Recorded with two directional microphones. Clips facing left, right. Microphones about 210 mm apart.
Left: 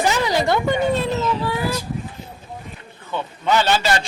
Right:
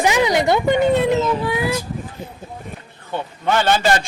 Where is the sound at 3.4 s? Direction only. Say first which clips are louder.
Right 1 dB; 50° right (ahead or behind).